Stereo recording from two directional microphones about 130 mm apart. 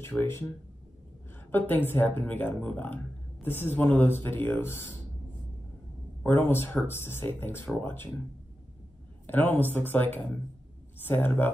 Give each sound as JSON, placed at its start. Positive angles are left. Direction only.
{"t": 0.0, "sound": "speech", "side_deg": 15}
{"t": 1.5, "sound": "speech", "side_deg": 15}
{"t": 6.2, "sound": "speech", "side_deg": 15}
{"t": 9.2, "sound": "speech", "side_deg": 15}